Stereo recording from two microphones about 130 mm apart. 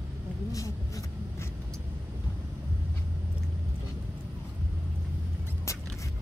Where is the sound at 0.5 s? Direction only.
25° left (ahead or behind).